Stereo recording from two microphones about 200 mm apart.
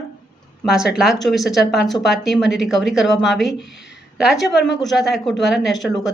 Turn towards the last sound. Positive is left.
turn(degrees=0)  # may be behind; listen again after turning